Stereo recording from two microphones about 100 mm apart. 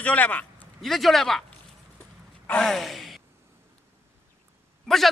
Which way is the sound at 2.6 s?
Centre (ahead or behind).